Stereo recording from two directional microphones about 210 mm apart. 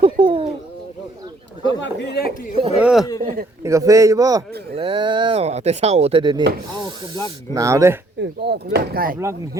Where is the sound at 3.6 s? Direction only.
15° right (ahead or behind).